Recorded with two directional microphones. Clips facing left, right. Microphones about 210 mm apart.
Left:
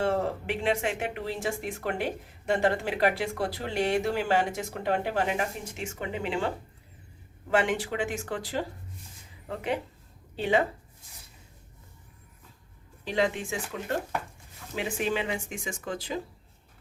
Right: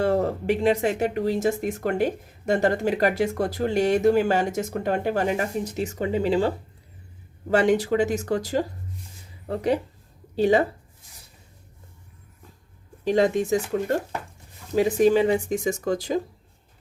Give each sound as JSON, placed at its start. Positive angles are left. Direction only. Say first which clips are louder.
{"t": 0.0, "sound": "speech", "louder": "right 5 dB", "side_deg": -40}
{"t": 7.5, "sound": "speech", "louder": "right 7 dB", "side_deg": -40}
{"t": 13.1, "sound": "speech", "louder": "right 8 dB", "side_deg": -45}